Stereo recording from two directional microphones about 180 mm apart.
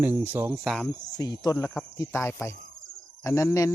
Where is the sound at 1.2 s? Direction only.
20° left (ahead or behind).